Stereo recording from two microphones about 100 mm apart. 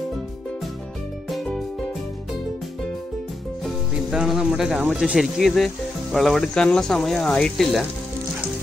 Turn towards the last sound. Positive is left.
turn(degrees=5)  # may be behind; listen again after turning